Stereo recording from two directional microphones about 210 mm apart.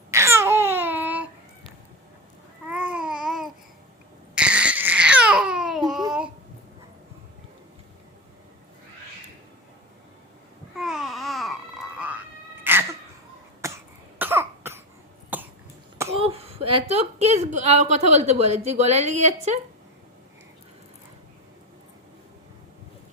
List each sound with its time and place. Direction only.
0.1 s babbling: 15° right (ahead or behind)
2.6 s babbling: 5° right (ahead or behind)
4.4 s a sound: 5° right (ahead or behind)
10.8 s babbling: centre (ahead or behind)
12.7 s sneeze: 10° right (ahead or behind)
13.6 s cough: 15° right (ahead or behind)
16.0 s a woman's voice: 25° right (ahead or behind)